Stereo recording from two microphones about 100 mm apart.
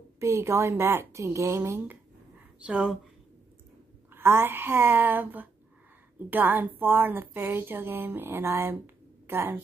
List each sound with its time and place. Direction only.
0.2 s a woman's voice: 30° right (ahead or behind)
2.6 s speech: 10° right (ahead or behind)
4.1 s a woman's voice: 25° right (ahead or behind)